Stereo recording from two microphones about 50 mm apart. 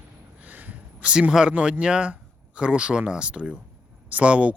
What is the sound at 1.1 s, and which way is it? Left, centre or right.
Speech, centre.